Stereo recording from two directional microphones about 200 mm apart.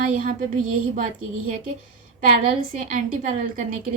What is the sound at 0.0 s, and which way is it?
A woman's voice, 45° right (ahead or behind).